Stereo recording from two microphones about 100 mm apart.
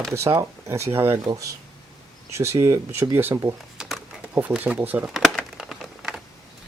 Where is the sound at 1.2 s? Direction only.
35° right (ahead or behind).